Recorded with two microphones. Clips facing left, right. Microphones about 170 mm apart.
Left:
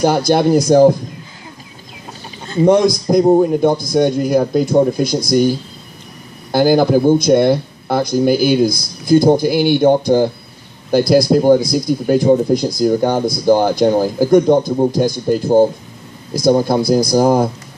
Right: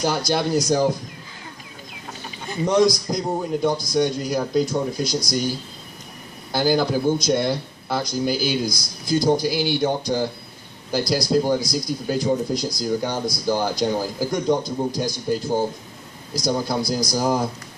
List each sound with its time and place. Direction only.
0.0 s speech: 55° left (ahead or behind)
2.6 s speech: 55° left (ahead or behind)
6.5 s speech: 55° left (ahead or behind)